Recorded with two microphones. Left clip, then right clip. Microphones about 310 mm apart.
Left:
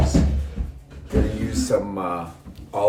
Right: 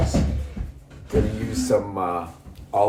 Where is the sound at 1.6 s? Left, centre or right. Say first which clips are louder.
Right 1 dB; centre.